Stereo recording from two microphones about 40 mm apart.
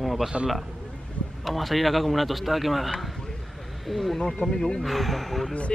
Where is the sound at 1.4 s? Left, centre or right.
Centre.